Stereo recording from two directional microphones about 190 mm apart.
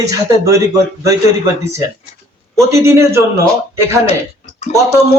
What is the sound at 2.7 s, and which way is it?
Speech, 15° right (ahead or behind).